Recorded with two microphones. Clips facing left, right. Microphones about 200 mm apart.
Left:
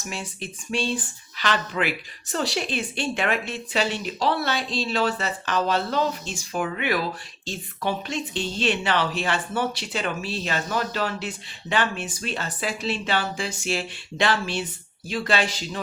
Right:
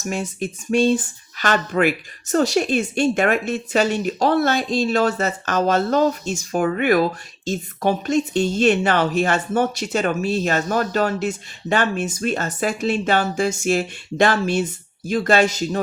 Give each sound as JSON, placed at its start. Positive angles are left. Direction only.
{"t": 0.0, "sound": "a woman's voice", "side_deg": -45}